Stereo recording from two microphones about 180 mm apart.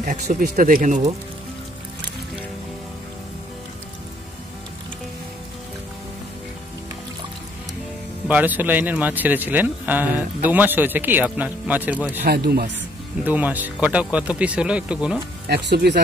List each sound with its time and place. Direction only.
0.0 s speech: 45° right (ahead or behind)
8.3 s speech: 10° right (ahead or behind)
12.3 s speech: 60° right (ahead or behind)
13.2 s speech: 10° right (ahead or behind)
15.4 s speech: 65° right (ahead or behind)